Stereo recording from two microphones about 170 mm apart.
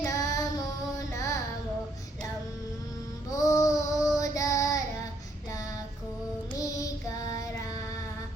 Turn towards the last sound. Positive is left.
turn(degrees=20)  # may be behind; listen again after turning